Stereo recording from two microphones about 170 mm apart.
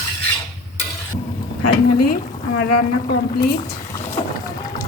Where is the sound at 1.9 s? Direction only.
65° left (ahead or behind).